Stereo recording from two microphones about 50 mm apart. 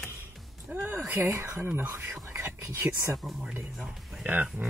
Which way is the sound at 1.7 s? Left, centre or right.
Right.